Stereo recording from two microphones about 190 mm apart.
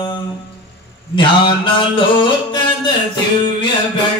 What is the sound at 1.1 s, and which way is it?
Mantra, 25° left (ahead or behind).